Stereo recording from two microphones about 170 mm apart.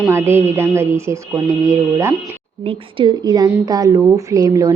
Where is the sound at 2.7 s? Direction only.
30° right (ahead or behind).